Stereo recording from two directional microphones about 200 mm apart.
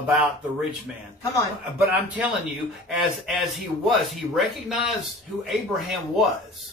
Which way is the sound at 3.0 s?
Centre (ahead or behind).